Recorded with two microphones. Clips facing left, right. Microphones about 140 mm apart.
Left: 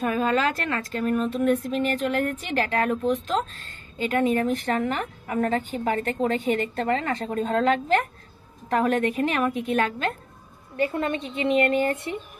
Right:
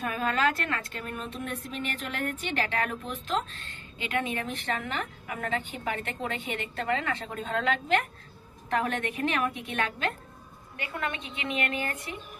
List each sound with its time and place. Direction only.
0.0 s speech: 30° left (ahead or behind)